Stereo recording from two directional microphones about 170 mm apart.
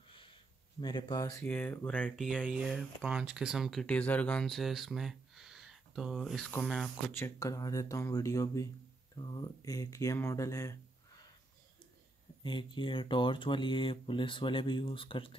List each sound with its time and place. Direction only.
0.1 s a sound: 30° left (ahead or behind)
1.4 s speech: 10° left (ahead or behind)
2.1 s speech: 5° right (ahead or behind); by 11.2 s 20° left (ahead or behind)
12.4 s speech: 30° left (ahead or behind)